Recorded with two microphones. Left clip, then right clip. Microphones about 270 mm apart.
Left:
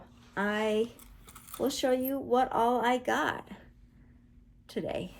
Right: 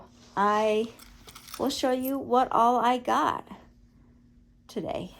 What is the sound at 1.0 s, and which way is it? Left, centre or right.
Squish, right.